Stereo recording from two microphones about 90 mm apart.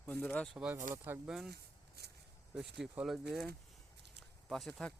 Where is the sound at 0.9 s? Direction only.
25° right (ahead or behind).